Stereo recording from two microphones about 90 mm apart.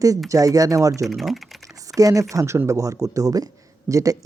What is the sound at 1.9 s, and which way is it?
Speech, 40° right (ahead or behind).